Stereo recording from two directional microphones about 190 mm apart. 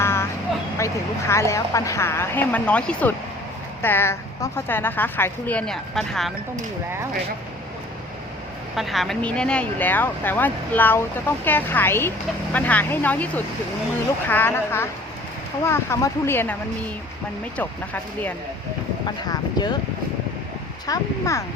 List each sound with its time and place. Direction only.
0.0 s vehicle: 15° left (ahead or behind)
1.3 s a woman's voice: 15° left (ahead or behind)
8.7 s a woman's voice: centre (ahead or behind)
17.6 s a woman's voice: 10° left (ahead or behind)
19.0 s speech: 20° left (ahead or behind)
20.8 s a woman's voice: 15° left (ahead or behind)